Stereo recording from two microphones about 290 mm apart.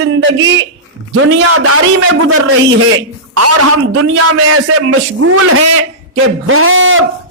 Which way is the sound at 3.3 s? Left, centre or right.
Right.